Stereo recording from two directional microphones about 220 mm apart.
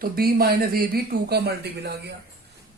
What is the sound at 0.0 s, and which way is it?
Speech, 40° right (ahead or behind).